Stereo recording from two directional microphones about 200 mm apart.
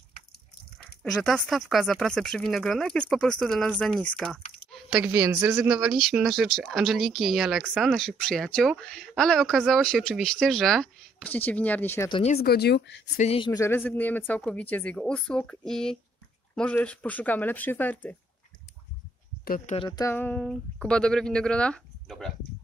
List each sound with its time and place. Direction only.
1.1 s speech: centre (ahead or behind)
12.1 s speech: 30° left (ahead or behind)
12.4 s speech: 50° left (ahead or behind)
13.2 s speech: 30° left (ahead or behind)
13.5 s speech: 15° left (ahead or behind)
19.4 s speech: 45° left (ahead or behind)
19.7 s speech: 25° left (ahead or behind)
20.1 s speech: 10° left (ahead or behind)